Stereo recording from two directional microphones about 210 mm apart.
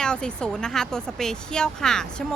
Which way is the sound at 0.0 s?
5° left (ahead or behind).